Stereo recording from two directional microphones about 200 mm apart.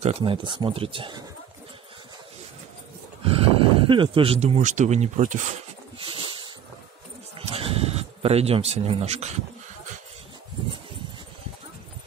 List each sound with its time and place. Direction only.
0.0 s speech: 30° right (ahead or behind)
3.3 s speech: 30° right (ahead or behind)
5.9 s dog: 25° right (ahead or behind)
7.3 s sheep: 30° right (ahead or behind)